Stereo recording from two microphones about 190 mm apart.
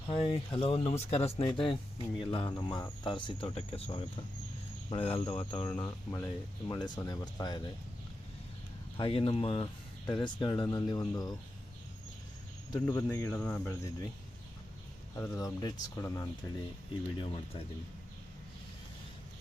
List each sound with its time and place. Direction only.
0.1 s speech: 30° left (ahead or behind)
5.6 s speech: 15° left (ahead or behind)
9.0 s speech: 30° left (ahead or behind)
12.9 s speech: 15° left (ahead or behind)
15.1 s speech: 15° left (ahead or behind)
17.2 s speech: 25° left (ahead or behind)